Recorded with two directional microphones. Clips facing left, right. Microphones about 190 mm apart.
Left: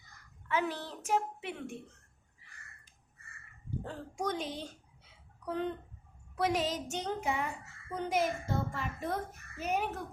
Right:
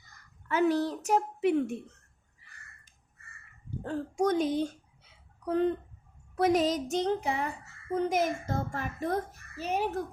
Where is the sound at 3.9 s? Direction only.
45° right (ahead or behind).